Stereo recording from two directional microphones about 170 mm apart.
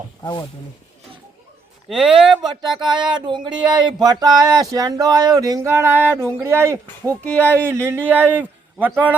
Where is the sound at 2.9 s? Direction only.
25° right (ahead or behind).